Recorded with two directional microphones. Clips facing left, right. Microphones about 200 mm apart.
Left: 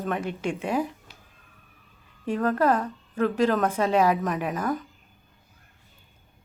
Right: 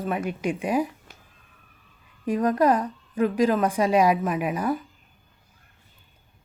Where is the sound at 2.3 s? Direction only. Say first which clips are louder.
Right 2 dB; 15° right (ahead or behind).